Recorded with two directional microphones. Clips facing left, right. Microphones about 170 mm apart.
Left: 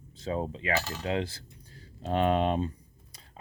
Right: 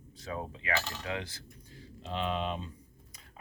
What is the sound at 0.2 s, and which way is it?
Coin, 25° left (ahead or behind).